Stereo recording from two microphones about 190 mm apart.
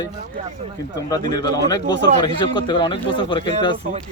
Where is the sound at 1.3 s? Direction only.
20° left (ahead or behind).